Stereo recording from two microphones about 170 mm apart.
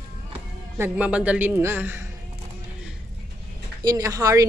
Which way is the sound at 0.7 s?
10° right (ahead or behind).